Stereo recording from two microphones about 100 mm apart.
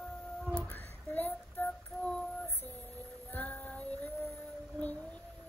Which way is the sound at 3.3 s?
15° left (ahead or behind).